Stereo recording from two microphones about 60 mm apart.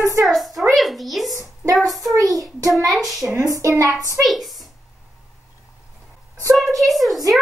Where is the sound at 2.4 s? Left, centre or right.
Right.